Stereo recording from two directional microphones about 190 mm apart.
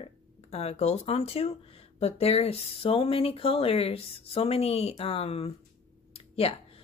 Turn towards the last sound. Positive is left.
turn(degrees=30)  # may be behind; listen again after turning